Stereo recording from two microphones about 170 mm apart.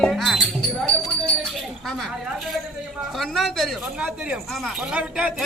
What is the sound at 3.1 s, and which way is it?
A man's voice, centre (ahead or behind).